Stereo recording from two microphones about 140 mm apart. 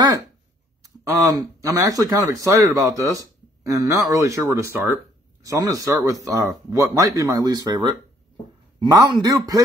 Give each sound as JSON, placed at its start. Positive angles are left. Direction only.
{"t": 0.8, "sound": "speech", "side_deg": -25}
{"t": 8.9, "sound": "speech", "side_deg": -25}